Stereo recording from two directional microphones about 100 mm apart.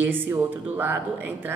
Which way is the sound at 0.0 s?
20° right (ahead or behind).